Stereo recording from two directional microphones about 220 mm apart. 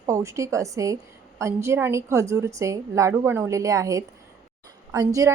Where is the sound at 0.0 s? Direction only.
15° right (ahead or behind).